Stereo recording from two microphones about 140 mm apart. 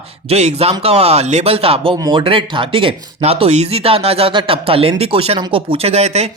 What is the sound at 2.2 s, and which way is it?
Speech, 40° right (ahead or behind).